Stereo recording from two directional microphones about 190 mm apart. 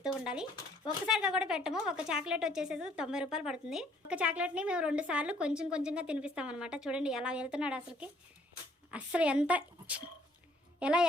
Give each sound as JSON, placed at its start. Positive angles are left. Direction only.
{"t": 1.0, "sound": "a woman's voice", "side_deg": -5}